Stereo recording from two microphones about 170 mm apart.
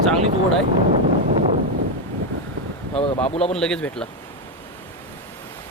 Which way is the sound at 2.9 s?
30° left (ahead or behind).